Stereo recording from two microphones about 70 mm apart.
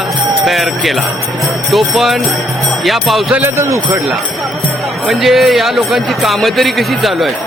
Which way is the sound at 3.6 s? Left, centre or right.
Right.